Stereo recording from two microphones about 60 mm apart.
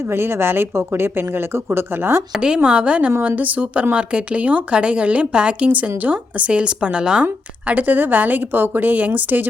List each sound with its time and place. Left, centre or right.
0.1 s speech: right
2.4 s speech: centre
7.7 s speech: right